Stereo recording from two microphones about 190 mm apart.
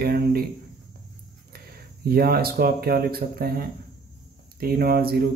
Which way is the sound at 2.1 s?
50° right (ahead or behind).